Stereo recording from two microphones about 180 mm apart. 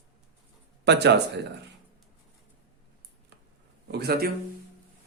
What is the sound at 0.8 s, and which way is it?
Speech, 70° right (ahead or behind).